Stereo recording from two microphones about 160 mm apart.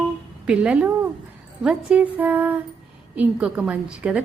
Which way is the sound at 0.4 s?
5° right (ahead or behind).